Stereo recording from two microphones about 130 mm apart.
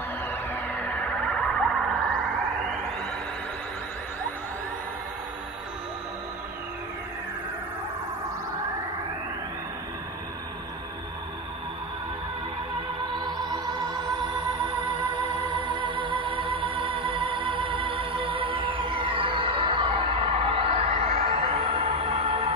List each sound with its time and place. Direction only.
0.3 s music: 15° left (ahead or behind)
13.1 s music: 35° right (ahead or behind)